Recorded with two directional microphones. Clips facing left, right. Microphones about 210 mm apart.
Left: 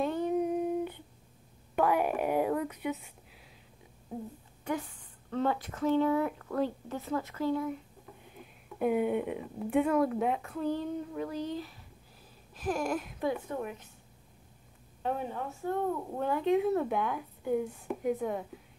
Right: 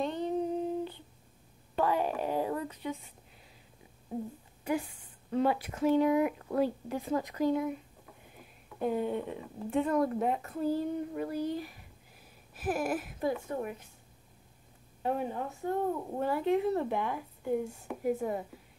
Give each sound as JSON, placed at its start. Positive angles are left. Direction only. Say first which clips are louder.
{"t": 0.0, "sound": "humming", "louder": "left 2 dB", "side_deg": 10}
{"t": 1.8, "sound": "a sound", "louder": "left 2 dB", "side_deg": 10}
{"t": 4.6, "sound": "speech", "louder": "right 2 dB", "side_deg": -10}
{"t": 8.7, "sound": "a woman's voice", "louder": "left 3 dB", "side_deg": 10}
{"t": 15.3, "sound": "speech", "louder": "even", "side_deg": -20}
{"t": 16.2, "sound": "speech", "louder": "left 1 dB", "side_deg": -5}